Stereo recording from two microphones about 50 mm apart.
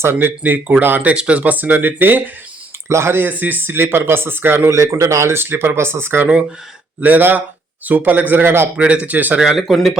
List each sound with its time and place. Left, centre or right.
0.0 s speech: right
1.0 s speech: right
2.9 s speech: right
3.2 s speech: right
4.7 s speech: right
5.4 s speech: right
7.0 s speech: right
8.7 s speech: right
9.4 s speech: centre